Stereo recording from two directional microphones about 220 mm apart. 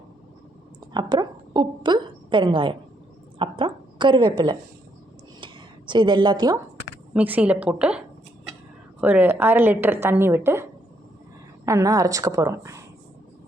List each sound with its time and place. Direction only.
0.9 s a woman's voice: 20° right (ahead or behind)
5.4 s a sound: 20° right (ahead or behind)
7.1 s a woman's voice: 5° right (ahead or behind)